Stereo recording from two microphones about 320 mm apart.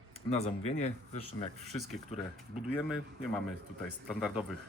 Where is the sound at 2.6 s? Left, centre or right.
Centre.